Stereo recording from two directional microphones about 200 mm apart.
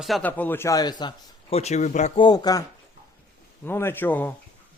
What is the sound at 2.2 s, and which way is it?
Speech, 20° left (ahead or behind).